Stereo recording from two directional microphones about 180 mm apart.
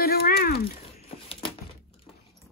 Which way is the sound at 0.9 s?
30° left (ahead or behind).